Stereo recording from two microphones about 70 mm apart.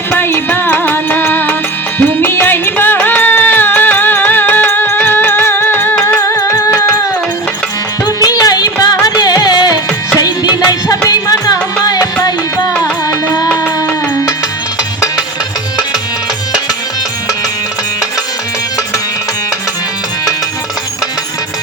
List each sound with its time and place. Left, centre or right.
0.1 s music: left
6.1 s music: left
8.0 s music: left
9.0 s music: left
11.1 s music: left